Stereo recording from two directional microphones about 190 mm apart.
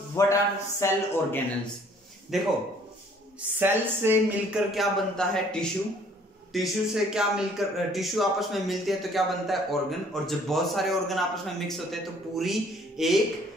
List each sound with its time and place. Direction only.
0.1 s a man's voice: 15° left (ahead or behind)
2.3 s speech: centre (ahead or behind)
3.3 s speech: 10° right (ahead or behind)